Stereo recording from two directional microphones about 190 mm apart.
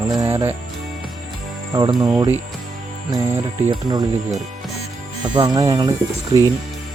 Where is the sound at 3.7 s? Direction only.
20° right (ahead or behind).